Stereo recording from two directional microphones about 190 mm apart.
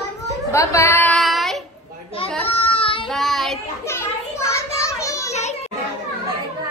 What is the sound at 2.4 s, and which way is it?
Child singing, 30° left (ahead or behind).